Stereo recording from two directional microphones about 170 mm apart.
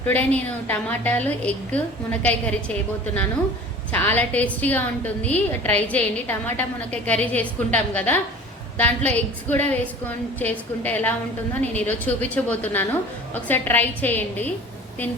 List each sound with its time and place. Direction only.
0.0 s a woman's voice: 10° left (ahead or behind)
3.9 s a woman's voice: 10° left (ahead or behind)